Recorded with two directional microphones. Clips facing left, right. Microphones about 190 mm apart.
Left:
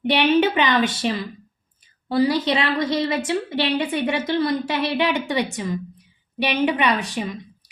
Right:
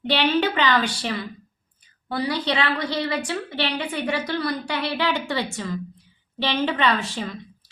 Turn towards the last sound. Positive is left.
turn(degrees=15)  # may be behind; listen again after turning